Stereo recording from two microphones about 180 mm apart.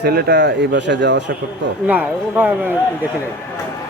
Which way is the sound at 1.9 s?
10° right (ahead or behind).